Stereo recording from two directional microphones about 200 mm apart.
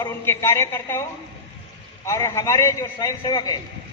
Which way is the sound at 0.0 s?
15° left (ahead or behind).